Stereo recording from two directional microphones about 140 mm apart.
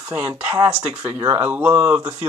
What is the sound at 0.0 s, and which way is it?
Speech, 15° right (ahead or behind).